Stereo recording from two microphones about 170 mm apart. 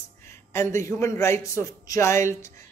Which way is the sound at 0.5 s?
15° left (ahead or behind).